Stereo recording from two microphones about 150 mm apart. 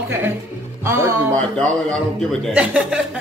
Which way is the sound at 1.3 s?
5° left (ahead or behind).